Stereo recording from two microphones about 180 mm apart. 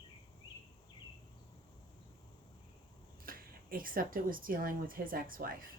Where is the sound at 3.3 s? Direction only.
55° right (ahead or behind).